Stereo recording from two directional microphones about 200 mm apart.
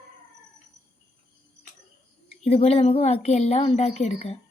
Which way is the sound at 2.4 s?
30° left (ahead or behind).